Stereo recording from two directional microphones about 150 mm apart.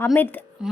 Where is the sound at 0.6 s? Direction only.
5° right (ahead or behind).